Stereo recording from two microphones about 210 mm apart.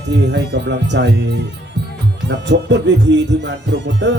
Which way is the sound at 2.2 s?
55° right (ahead or behind).